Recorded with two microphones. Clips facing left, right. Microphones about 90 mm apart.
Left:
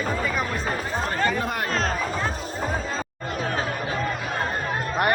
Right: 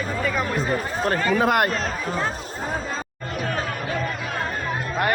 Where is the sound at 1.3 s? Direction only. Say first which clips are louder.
Right 8 dB; 90° right.